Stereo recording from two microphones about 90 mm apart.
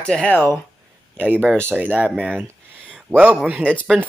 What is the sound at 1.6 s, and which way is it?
Speech, 20° right (ahead or behind).